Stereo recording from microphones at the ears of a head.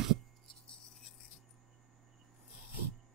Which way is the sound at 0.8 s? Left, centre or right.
Left.